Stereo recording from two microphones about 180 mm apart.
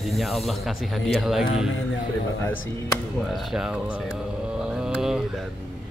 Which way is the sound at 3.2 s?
Centre (ahead or behind).